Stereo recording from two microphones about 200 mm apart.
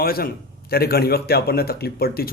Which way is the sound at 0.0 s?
50° left (ahead or behind).